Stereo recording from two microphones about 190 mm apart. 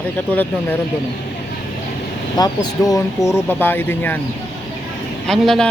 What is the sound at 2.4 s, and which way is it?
A man's voice, 20° left (ahead or behind).